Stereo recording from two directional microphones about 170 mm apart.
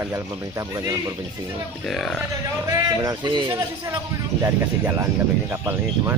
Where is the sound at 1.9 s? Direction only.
Centre (ahead or behind).